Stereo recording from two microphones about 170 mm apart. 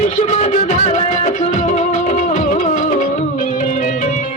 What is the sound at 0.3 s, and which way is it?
Music, 40° left (ahead or behind).